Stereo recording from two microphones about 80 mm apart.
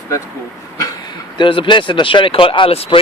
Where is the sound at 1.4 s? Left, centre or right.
Left.